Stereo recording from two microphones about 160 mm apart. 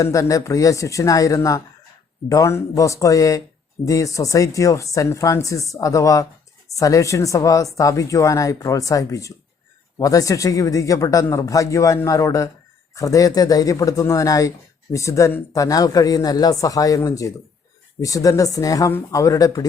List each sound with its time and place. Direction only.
0.0 s speech: 20° left (ahead or behind)